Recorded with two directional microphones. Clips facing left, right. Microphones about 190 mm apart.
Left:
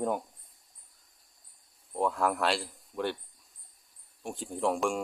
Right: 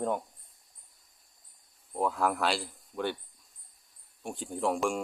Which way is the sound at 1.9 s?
Centre (ahead or behind).